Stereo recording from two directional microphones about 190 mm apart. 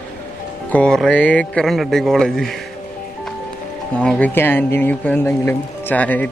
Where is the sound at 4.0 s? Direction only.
5° left (ahead or behind).